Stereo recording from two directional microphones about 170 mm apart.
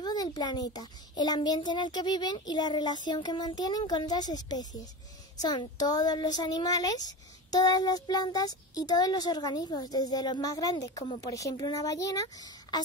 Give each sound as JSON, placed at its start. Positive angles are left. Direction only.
{"t": 0.0, "sound": "speech", "side_deg": 25}